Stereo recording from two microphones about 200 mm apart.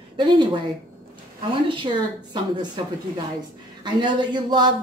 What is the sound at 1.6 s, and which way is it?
Speech, 25° right (ahead or behind).